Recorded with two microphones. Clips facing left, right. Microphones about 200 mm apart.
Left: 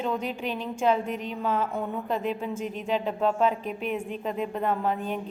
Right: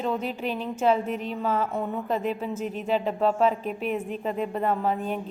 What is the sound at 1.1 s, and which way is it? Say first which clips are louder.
Speech: right 2 dB; 35° right (ahead or behind).